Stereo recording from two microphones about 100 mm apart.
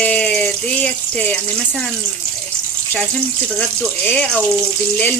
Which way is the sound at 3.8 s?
15° left (ahead or behind).